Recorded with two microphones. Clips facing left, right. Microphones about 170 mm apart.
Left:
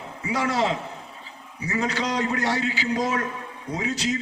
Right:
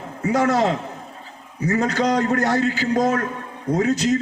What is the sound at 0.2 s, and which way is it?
A man's voice, 45° right (ahead or behind).